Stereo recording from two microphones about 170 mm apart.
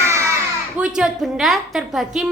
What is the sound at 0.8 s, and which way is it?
A woman's voice, 5° right (ahead or behind).